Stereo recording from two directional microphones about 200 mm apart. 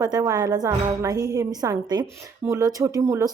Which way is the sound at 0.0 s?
15° right (ahead or behind).